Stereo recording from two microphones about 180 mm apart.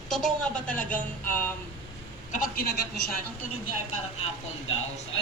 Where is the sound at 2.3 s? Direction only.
55° left (ahead or behind).